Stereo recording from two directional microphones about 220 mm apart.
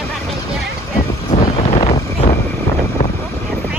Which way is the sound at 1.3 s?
30° left (ahead or behind).